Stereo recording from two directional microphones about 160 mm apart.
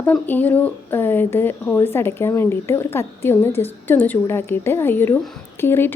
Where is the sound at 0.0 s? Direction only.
10° left (ahead or behind).